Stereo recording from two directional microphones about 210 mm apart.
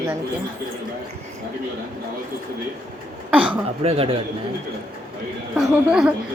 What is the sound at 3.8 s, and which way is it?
Speech, 30° right (ahead or behind).